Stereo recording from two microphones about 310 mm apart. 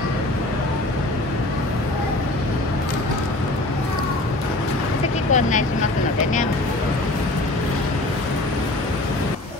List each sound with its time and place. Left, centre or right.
5.3 s speech: left